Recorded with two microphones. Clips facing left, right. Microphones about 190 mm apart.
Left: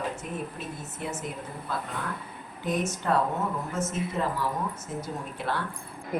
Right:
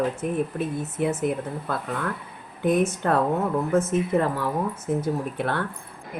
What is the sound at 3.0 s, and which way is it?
Speech, 60° right (ahead or behind).